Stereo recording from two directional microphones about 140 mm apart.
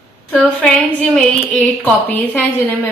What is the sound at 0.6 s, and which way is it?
A woman's voice, 10° left (ahead or behind).